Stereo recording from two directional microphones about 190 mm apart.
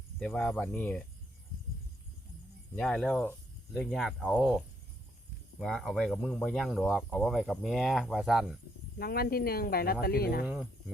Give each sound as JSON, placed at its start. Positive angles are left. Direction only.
{"t": 0.2, "sound": "speech", "side_deg": 0}
{"t": 2.7, "sound": "speech", "side_deg": 5}
{"t": 9.0, "sound": "speech", "side_deg": 55}
{"t": 10.4, "sound": "speech", "side_deg": -5}